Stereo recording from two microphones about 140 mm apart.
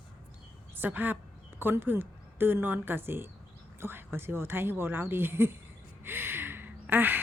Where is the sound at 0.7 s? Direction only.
15° right (ahead or behind).